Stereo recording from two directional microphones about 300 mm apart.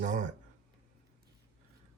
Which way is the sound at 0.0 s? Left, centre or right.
Right.